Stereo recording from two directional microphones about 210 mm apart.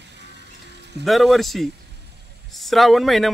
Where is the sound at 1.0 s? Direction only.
Centre (ahead or behind).